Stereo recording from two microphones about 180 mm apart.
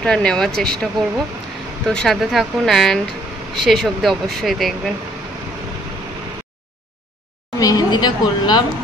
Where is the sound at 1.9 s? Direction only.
5° left (ahead or behind).